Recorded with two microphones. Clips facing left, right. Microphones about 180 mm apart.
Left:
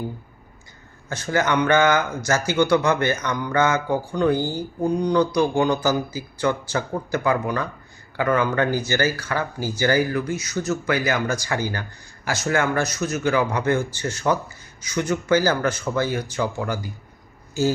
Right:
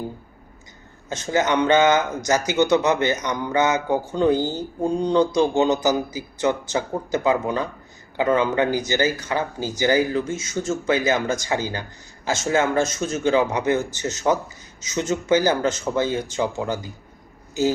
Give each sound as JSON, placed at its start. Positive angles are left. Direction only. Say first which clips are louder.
{"t": 1.1, "sound": "speech", "louder": "right 1 dB", "side_deg": -20}